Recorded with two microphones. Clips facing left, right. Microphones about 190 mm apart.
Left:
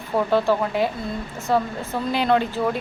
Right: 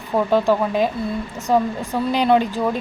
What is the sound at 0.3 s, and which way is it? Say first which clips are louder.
Speech: right 3 dB; 15° right (ahead or behind).